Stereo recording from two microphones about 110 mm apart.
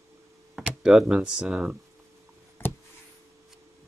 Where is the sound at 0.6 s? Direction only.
5° right (ahead or behind).